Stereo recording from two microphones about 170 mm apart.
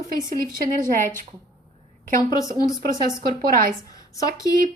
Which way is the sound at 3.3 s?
55° right (ahead or behind).